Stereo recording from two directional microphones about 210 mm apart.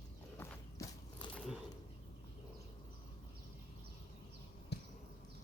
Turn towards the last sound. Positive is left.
turn(degrees=50)  # may be behind; listen again after turning